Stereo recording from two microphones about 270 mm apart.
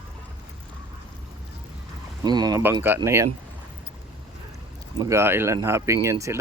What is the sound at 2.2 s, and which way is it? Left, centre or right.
Speech, centre.